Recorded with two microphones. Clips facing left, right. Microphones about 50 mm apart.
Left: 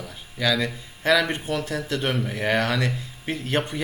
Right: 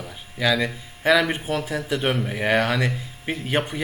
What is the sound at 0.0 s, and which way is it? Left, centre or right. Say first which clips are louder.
Speech: right 2 dB; centre.